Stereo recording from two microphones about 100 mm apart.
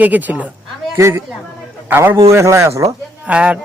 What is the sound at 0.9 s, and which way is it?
A man's voice, 25° right (ahead or behind).